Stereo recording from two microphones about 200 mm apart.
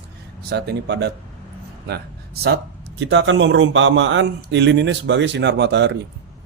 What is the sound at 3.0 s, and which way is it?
Speech, 65° right (ahead or behind).